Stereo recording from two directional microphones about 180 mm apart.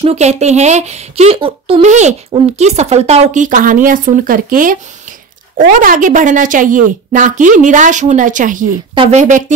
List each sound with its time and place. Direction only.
0.0 s a woman's voice: 35° right (ahead or behind)
8.9 s speech: 30° right (ahead or behind)